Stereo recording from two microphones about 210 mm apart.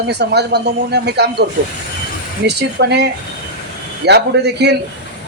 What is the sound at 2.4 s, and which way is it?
Speech, 50° right (ahead or behind).